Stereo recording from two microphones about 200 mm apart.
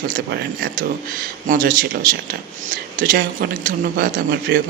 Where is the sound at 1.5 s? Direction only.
45° right (ahead or behind).